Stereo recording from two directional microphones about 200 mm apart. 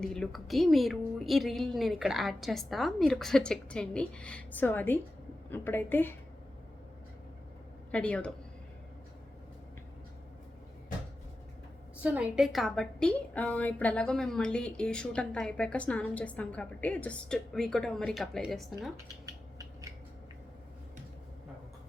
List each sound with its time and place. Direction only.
0.0 s a woman's voice: centre (ahead or behind)
7.9 s speech: 5° left (ahead or behind)
12.0 s a woman's voice: 5° right (ahead or behind)
19.2 s a sound: 15° right (ahead or behind)